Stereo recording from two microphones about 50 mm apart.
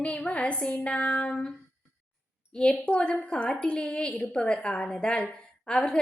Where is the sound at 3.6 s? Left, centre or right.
Centre.